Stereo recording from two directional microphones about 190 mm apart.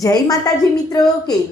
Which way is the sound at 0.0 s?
20° left (ahead or behind).